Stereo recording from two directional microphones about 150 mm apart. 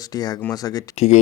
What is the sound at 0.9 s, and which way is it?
Speech, 45° left (ahead or behind).